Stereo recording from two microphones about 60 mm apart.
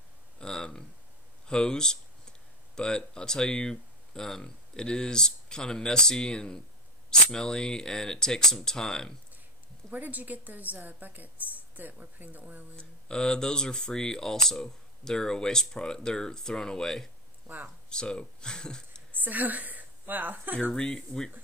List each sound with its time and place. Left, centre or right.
0.4 s speech: centre
9.8 s a woman's voice: right
13.1 s speech: centre
19.1 s a woman's voice: right
20.7 s speech: centre